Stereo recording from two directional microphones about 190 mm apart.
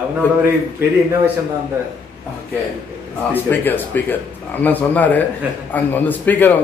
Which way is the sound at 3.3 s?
10° left (ahead or behind).